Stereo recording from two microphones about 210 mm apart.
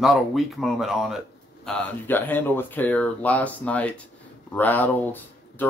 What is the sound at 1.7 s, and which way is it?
Speech, 10° left (ahead or behind).